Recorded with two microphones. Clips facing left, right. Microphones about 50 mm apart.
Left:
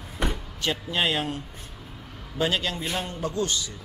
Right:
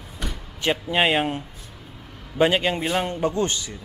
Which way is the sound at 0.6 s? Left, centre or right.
Right.